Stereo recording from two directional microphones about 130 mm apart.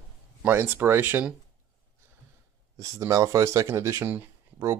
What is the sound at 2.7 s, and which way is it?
Speech, 25° right (ahead or behind).